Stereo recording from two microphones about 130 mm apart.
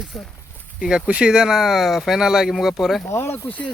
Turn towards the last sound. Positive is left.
turn(degrees=10)  # may be behind; listen again after turning